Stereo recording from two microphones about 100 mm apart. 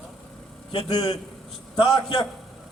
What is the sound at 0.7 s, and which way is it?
A man's voice, 65° left (ahead or behind).